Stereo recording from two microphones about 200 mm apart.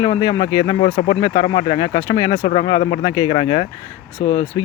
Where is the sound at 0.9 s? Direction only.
30° left (ahead or behind).